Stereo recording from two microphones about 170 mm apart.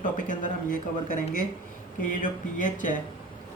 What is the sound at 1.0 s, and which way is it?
Speech, 50° left (ahead or behind).